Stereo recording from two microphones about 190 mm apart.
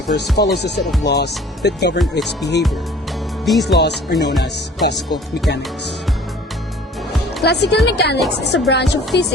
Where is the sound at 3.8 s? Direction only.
60° left (ahead or behind).